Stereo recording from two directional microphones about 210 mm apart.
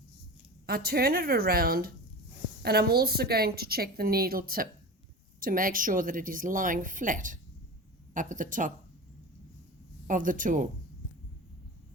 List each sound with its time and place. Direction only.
0.7 s a woman's voice: 45° right (ahead or behind)
10.1 s speech: 40° right (ahead or behind)